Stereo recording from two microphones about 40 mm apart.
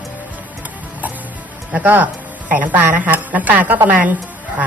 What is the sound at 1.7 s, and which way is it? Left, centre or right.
A woman's voice, right.